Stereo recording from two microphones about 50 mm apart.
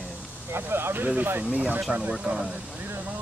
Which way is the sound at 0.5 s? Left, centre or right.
Right.